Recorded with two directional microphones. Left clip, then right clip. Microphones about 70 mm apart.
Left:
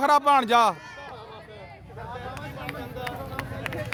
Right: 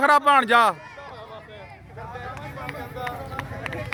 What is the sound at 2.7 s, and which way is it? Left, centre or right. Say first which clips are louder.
Run: right 3 dB; left.